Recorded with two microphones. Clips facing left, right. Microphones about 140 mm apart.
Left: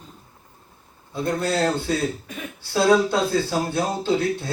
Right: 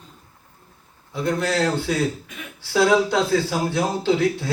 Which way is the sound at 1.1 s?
90° right.